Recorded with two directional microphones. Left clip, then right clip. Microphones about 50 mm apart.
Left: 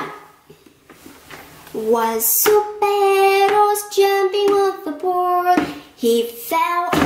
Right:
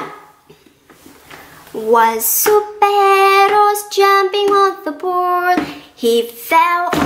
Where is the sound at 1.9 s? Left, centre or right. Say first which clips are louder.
Right 7 dB; right.